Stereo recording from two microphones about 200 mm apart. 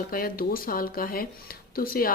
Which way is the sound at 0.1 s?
45° left (ahead or behind).